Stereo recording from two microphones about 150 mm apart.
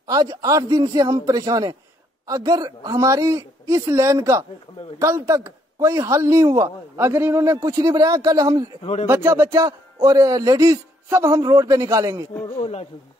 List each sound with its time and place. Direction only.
0.0 s speech: 25° right (ahead or behind)
12.5 s speech: 40° left (ahead or behind)